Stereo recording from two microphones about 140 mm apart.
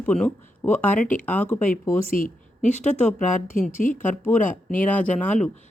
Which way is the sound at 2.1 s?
75° left (ahead or behind).